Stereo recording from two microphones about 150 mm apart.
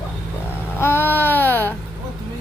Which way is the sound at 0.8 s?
15° left (ahead or behind).